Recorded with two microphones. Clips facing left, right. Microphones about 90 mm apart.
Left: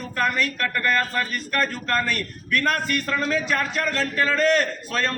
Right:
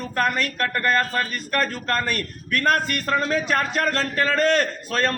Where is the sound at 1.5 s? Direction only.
40° right (ahead or behind).